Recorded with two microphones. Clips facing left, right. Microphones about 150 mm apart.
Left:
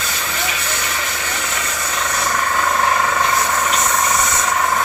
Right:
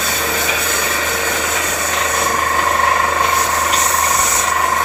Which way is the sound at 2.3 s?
40° right (ahead or behind).